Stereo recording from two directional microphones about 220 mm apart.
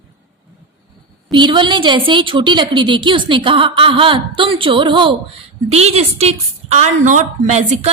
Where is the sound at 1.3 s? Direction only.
20° right (ahead or behind).